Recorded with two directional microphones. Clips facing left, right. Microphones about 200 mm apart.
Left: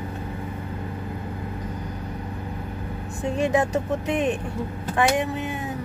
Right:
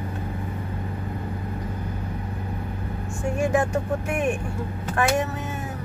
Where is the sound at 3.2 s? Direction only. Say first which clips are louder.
Left 1 dB; 20° left (ahead or behind).